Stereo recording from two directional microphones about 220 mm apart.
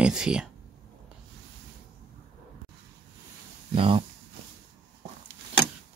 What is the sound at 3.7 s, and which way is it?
Speech, 25° right (ahead or behind).